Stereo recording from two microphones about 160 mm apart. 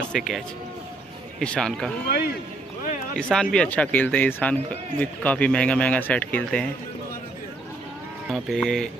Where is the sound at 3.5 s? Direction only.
5° left (ahead or behind).